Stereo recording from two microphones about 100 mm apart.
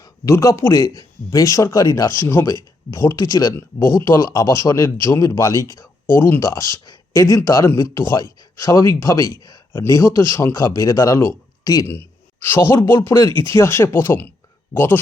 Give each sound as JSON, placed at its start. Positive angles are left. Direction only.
{"t": 0.0, "sound": "speech", "side_deg": 30}
{"t": 2.2, "sound": "a man's voice", "side_deg": 25}
{"t": 3.8, "sound": "a man's voice", "side_deg": 25}
{"t": 9.7, "sound": "speech", "side_deg": 25}
{"t": 11.9, "sound": "speech", "side_deg": 20}